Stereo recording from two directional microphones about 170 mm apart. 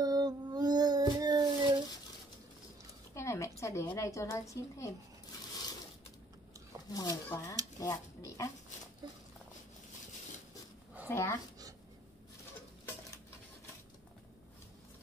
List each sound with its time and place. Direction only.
0.0 s a sound: 25° right (ahead or behind)
3.2 s a woman's voice: 15° left (ahead or behind)
6.9 s speech: 20° left (ahead or behind)
9.0 s speech: 25° right (ahead or behind)
11.1 s speech: 15° left (ahead or behind)